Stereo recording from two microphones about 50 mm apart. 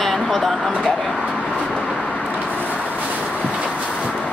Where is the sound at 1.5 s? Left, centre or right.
Centre.